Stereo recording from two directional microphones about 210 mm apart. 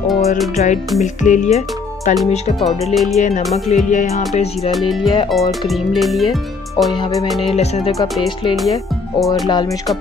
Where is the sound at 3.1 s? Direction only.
35° left (ahead or behind).